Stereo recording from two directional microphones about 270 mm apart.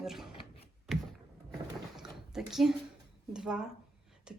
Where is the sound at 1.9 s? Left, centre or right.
Centre.